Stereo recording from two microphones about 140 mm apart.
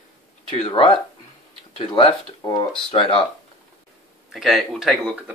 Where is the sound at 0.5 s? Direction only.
40° left (ahead or behind).